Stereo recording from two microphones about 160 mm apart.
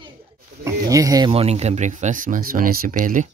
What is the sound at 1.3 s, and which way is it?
Speech, 40° right (ahead or behind).